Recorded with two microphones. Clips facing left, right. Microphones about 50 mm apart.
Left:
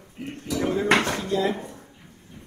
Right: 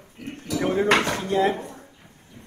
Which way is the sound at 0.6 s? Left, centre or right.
Right.